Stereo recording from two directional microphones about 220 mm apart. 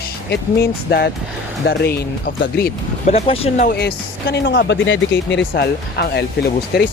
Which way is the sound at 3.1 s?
25° left (ahead or behind).